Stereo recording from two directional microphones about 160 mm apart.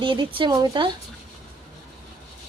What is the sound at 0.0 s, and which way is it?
Speech, 30° right (ahead or behind).